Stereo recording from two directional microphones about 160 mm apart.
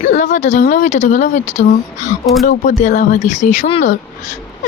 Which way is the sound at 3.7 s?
35° left (ahead or behind).